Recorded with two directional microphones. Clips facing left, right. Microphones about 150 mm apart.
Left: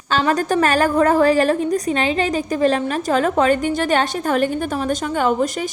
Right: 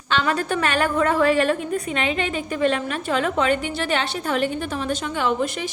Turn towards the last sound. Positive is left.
turn(degrees=45)  # may be behind; listen again after turning